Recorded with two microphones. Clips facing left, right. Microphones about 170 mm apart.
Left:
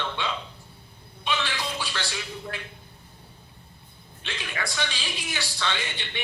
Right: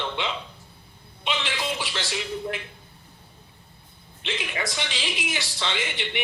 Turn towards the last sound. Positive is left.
turn(degrees=-20)  # may be behind; listen again after turning